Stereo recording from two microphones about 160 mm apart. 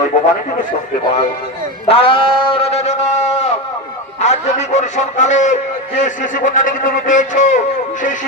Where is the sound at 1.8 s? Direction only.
35° left (ahead or behind).